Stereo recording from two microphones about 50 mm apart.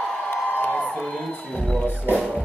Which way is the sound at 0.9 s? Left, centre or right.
Centre.